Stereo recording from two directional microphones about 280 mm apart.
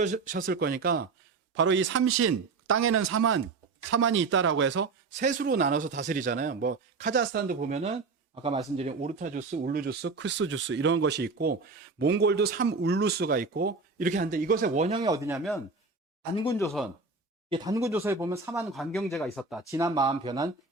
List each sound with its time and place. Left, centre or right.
0.0 s speech: right
5.2 s a man's voice: right; by 15.4 s centre
16.3 s speech: centre
17.5 s speech: centre